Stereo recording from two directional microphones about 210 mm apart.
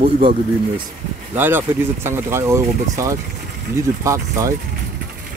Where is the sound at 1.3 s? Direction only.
10° right (ahead or behind).